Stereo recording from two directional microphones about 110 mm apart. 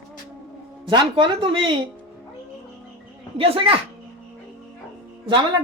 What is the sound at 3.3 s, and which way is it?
Speech, 60° right (ahead or behind).